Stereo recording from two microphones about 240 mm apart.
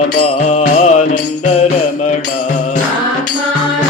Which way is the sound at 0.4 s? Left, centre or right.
Left.